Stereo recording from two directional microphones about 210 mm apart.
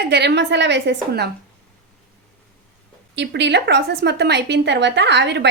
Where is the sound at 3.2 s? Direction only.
55° right (ahead or behind).